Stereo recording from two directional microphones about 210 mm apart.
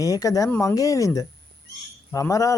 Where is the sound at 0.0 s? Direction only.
15° left (ahead or behind).